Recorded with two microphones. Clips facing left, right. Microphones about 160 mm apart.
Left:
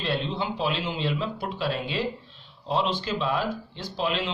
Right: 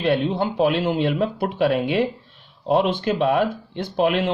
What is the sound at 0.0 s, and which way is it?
Speech, 55° right (ahead or behind).